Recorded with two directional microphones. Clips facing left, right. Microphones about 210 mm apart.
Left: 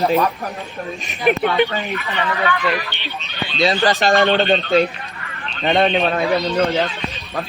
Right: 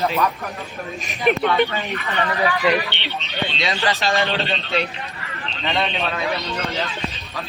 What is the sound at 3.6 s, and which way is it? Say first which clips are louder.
Speech: left 8 dB; 35° left (ahead or behind).